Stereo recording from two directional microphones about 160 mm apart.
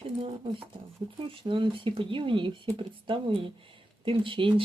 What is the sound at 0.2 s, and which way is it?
Speech, 35° right (ahead or behind).